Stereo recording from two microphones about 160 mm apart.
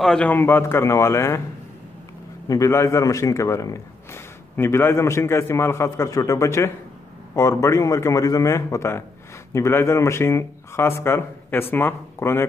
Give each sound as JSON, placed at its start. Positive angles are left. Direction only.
{"t": 0.0, "sound": "speech", "side_deg": 5}
{"t": 2.4, "sound": "a man's voice", "side_deg": 20}